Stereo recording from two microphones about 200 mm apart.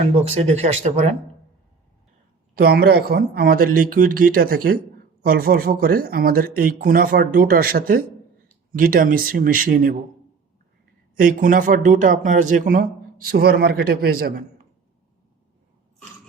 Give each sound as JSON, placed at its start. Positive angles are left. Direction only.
{"t": 0.3, "sound": "speech", "side_deg": -35}
{"t": 2.6, "sound": "speech", "side_deg": -50}
{"t": 11.2, "sound": "speech", "side_deg": -40}